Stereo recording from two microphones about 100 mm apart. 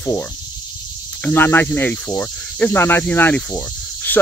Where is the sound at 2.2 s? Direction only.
15° left (ahead or behind).